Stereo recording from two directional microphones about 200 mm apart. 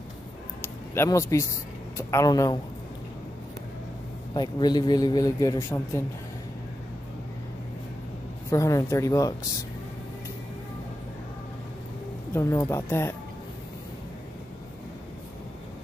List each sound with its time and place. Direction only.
0.6 s speech: 15° left (ahead or behind)
4.3 s a man's voice: 20° left (ahead or behind)
8.5 s speech: 15° left (ahead or behind)
12.4 s speech: 15° left (ahead or behind)